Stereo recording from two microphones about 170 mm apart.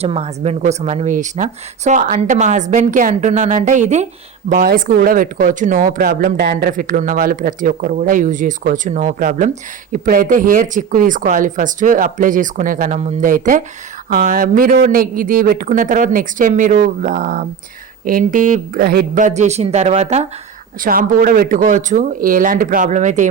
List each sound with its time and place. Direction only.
0.0 s speech: 35° right (ahead or behind)
4.4 s speech: 55° right (ahead or behind)
20.8 s speech: 55° right (ahead or behind)